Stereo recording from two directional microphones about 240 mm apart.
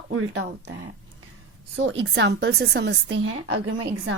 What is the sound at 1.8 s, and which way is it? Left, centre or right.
A woman's voice, right.